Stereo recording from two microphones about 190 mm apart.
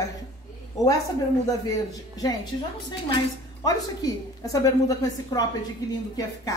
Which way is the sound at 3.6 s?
20° left (ahead or behind).